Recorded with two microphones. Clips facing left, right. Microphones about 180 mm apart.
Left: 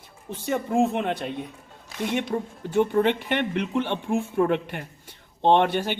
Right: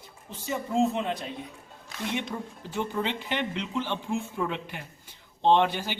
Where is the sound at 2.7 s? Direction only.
55° left (ahead or behind).